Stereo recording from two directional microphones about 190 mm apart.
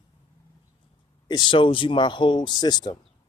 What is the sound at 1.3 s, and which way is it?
Speech, 25° left (ahead or behind).